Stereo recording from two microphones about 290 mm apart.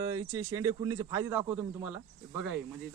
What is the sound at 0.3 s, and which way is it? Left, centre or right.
Speech, centre.